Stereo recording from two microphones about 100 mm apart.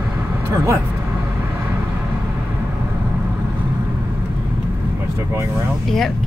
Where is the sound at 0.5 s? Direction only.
35° right (ahead or behind).